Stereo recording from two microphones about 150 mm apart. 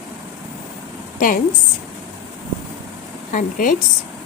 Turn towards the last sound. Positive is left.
turn(degrees=60)  # may be behind; listen again after turning